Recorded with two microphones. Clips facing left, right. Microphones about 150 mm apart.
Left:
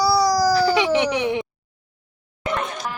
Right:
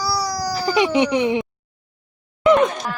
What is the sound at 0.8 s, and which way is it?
Speech, 15° right (ahead or behind).